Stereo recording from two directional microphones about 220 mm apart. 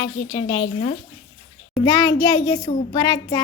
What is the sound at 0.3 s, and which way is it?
A child's voice, 25° left (ahead or behind).